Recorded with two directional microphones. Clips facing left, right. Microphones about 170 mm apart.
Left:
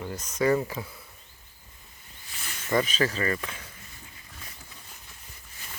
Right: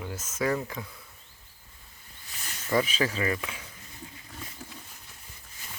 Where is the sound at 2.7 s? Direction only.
5° right (ahead or behind).